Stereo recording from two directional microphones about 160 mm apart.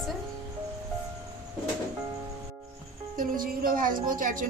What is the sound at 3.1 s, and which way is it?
Speech, 60° right (ahead or behind).